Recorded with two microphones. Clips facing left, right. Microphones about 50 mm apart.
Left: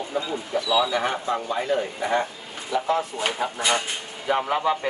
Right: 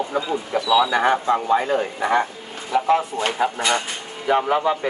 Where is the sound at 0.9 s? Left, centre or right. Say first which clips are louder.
Right 6 dB; right.